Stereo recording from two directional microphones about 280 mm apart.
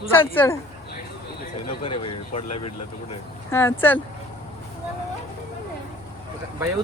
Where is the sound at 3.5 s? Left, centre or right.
Centre.